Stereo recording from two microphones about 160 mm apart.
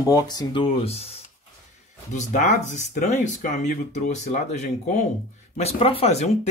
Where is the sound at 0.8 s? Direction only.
40° left (ahead or behind).